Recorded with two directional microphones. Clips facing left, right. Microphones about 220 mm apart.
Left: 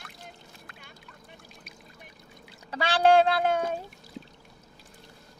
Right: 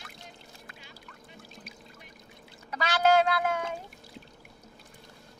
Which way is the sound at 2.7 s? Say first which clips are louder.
Left 3 dB; 30° left (ahead or behind).